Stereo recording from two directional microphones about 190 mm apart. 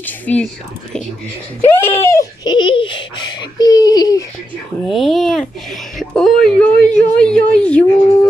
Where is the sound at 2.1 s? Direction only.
20° left (ahead or behind).